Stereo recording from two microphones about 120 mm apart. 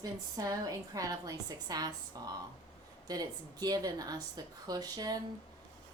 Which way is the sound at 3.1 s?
30° right (ahead or behind).